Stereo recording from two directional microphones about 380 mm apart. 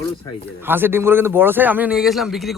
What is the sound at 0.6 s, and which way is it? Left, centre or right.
Speech, centre.